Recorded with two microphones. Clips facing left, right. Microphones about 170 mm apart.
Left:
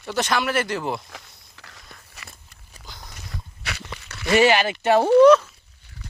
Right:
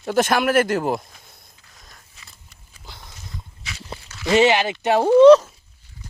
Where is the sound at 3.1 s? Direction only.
65° left (ahead or behind).